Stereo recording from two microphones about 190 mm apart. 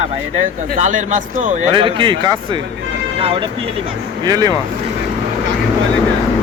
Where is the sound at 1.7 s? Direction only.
25° right (ahead or behind).